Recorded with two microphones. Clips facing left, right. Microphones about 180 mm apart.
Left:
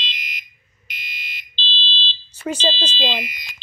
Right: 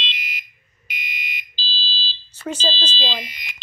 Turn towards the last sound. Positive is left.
turn(degrees=-35)  # may be behind; listen again after turning